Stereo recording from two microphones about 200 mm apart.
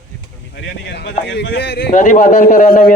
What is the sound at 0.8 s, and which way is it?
Speech, 60° left (ahead or behind).